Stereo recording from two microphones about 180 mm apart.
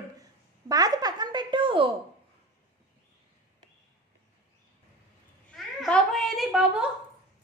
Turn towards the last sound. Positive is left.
turn(degrees=-5)  # may be behind; listen again after turning